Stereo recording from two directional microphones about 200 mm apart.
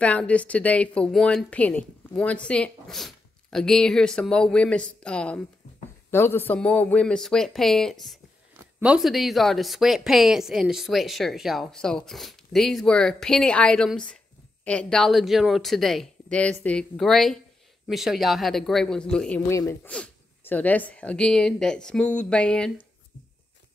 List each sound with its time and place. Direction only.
0.0 s a woman's voice: 5° left (ahead or behind)